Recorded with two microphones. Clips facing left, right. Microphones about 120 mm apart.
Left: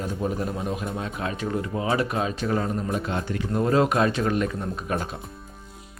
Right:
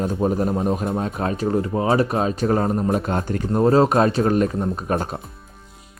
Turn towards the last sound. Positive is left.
turn(degrees=-40)  # may be behind; listen again after turning